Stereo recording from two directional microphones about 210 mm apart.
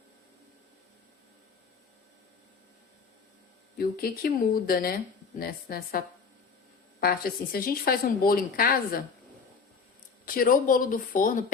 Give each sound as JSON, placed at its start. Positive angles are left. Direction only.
{"t": 3.8, "sound": "a woman's voice", "side_deg": 45}
{"t": 7.0, "sound": "a woman's voice", "side_deg": 45}
{"t": 10.2, "sound": "speech", "side_deg": 40}